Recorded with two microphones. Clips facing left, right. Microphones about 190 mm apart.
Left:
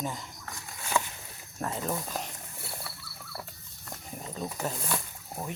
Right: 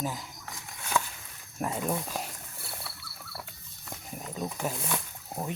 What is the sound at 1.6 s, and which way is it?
Speech, 10° right (ahead or behind).